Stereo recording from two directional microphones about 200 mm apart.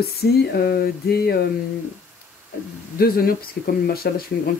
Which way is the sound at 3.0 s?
50° left (ahead or behind).